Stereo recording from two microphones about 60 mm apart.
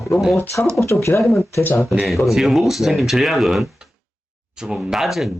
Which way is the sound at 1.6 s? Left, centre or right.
Left.